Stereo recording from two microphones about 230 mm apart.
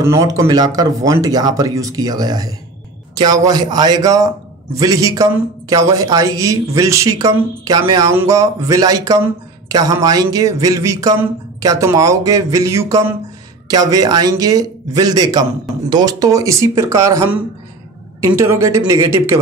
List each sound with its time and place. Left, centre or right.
0.0 s a man's voice: centre